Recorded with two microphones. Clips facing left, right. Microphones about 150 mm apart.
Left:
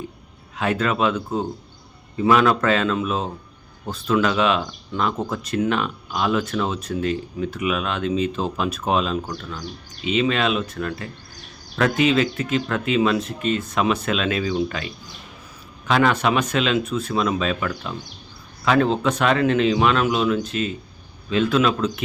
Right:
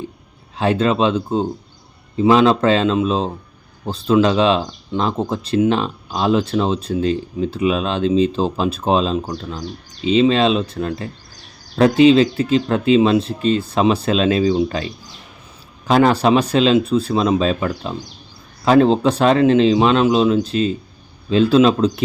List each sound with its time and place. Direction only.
0.5 s speech: 30° right (ahead or behind)
15.9 s speech: 35° right (ahead or behind)